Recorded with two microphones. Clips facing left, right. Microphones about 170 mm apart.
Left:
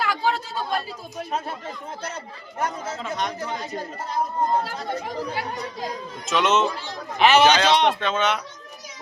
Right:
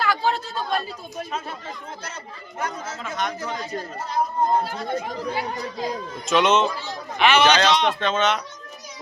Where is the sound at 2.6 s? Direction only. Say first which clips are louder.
Left 2 dB; 35° left (ahead or behind).